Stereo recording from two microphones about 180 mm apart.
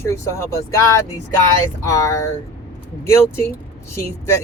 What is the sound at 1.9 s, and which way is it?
Speech, 15° left (ahead or behind).